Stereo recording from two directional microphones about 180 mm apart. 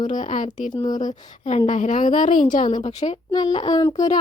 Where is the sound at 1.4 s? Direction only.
35° left (ahead or behind).